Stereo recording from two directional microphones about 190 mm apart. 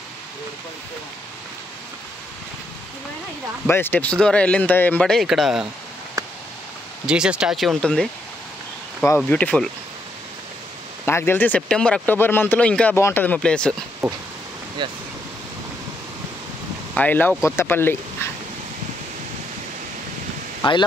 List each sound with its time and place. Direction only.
3.6 s speech: 10° left (ahead or behind)
7.1 s speech: 5° right (ahead or behind)
11.1 s speech: 10° left (ahead or behind)
14.0 s a sound: centre (ahead or behind)
14.8 s speech: 25° right (ahead or behind)
16.9 s speech: 10° left (ahead or behind)
20.6 s speech: 25° left (ahead or behind)